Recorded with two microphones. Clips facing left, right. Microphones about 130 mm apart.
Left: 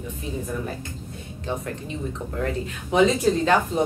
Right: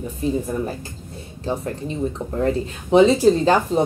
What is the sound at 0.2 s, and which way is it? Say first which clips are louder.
Speech: right 8 dB; 35° right (ahead or behind).